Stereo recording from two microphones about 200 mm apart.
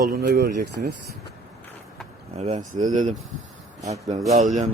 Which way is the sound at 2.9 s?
40° right (ahead or behind).